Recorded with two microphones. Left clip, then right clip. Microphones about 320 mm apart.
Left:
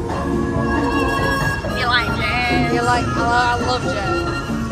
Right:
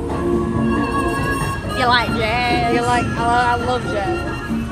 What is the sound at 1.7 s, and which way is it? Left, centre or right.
Vehicle, centre.